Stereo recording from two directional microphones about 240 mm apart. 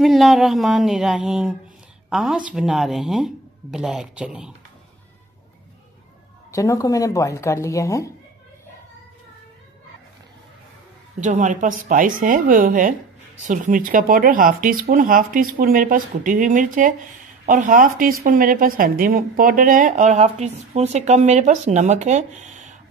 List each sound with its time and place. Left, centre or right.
0.0 s speech: centre
6.5 s speech: centre
11.1 s a woman's voice: right